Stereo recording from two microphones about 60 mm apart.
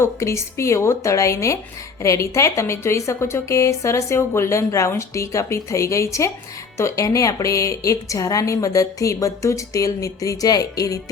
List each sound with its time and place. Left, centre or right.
0.0 s a woman's voice: left